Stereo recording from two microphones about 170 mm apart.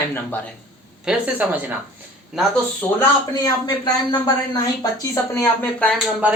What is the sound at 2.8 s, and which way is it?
Speech, 10° left (ahead or behind).